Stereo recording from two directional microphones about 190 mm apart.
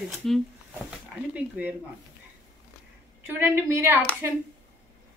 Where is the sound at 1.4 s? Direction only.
10° right (ahead or behind).